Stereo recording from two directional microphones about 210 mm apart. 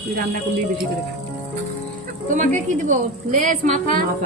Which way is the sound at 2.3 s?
40° right (ahead or behind).